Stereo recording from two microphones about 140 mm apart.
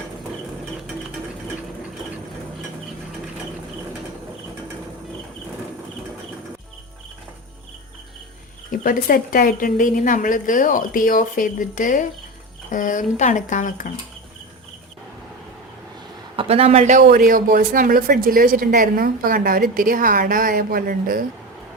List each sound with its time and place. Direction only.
8.8 s a woman's voice: 90° left; by 13.9 s 65° left (ahead or behind)
16.3 s a man's voice: 40° right (ahead or behind)
17.1 s speech: 80° right